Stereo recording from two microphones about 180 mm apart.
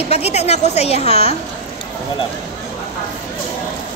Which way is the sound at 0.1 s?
35° left (ahead or behind).